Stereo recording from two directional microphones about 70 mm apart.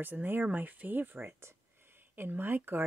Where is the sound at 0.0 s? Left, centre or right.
Right.